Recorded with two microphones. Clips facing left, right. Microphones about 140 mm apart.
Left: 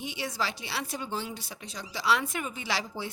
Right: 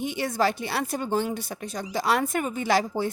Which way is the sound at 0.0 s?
50° right (ahead or behind).